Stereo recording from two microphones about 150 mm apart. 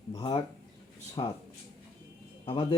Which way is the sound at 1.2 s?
35° left (ahead or behind).